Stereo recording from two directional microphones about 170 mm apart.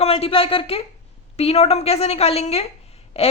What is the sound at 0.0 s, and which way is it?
Speech, 35° left (ahead or behind).